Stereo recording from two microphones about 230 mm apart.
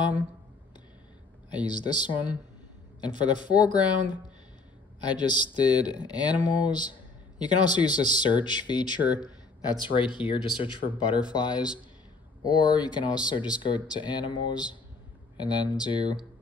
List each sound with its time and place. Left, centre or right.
1.7 s speech: centre